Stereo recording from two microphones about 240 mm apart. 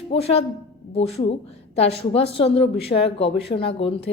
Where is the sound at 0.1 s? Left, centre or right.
Left.